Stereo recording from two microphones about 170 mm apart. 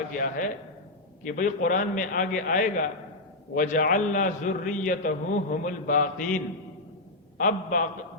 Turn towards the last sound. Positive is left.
turn(degrees=50)  # may be behind; listen again after turning